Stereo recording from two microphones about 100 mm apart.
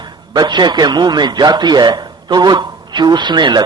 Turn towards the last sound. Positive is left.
turn(degrees=-45)  # may be behind; listen again after turning